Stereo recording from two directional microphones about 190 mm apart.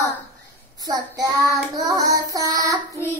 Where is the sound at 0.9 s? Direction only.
20° right (ahead or behind).